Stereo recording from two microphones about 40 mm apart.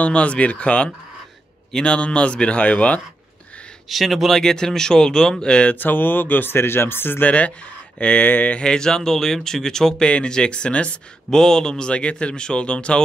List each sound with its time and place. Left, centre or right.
0.0 s speech: left
1.9 s speech: left
3.9 s speech: centre
4.4 s speech: centre
5.7 s speech: left
7.2 s speech: left
8.5 s speech: centre
10.0 s speech: left
11.2 s speech: centre
11.9 s speech: left